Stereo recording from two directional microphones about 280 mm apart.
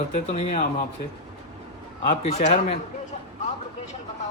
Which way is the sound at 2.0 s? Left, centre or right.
Left.